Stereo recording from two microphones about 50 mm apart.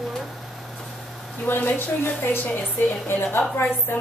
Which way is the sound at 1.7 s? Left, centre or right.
Left.